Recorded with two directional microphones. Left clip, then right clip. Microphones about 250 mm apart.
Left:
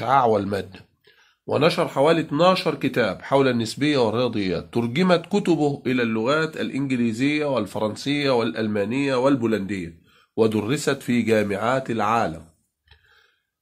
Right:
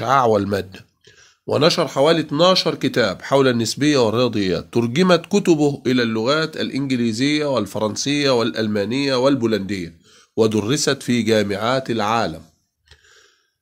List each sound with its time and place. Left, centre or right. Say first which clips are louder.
0.0 s speech: right 3 dB; right